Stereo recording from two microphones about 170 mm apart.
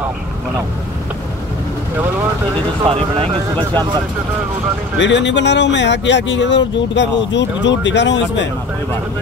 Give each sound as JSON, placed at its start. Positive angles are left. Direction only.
{"t": 2.9, "sound": "speech", "side_deg": -35}
{"t": 4.9, "sound": "speech", "side_deg": 90}